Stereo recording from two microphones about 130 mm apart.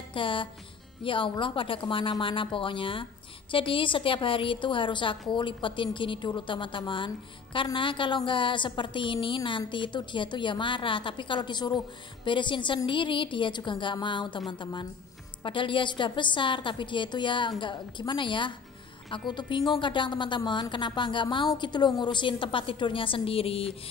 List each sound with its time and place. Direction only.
0.1 s a woman's voice: 40° left (ahead or behind)